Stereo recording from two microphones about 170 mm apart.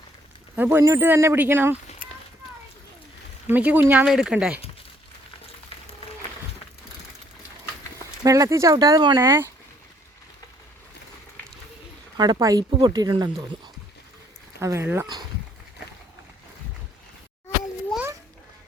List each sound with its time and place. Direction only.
0.5 s speech: 10° right (ahead or behind)
3.5 s speech: 10° right (ahead or behind)
8.2 s speech: 20° right (ahead or behind)
12.1 s speech: 25° right (ahead or behind)
14.6 s speech: 15° right (ahead or behind)